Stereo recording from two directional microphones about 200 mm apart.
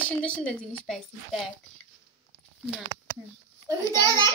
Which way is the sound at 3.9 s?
20° right (ahead or behind).